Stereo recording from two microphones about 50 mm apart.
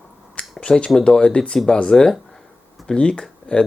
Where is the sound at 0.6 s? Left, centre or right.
Centre.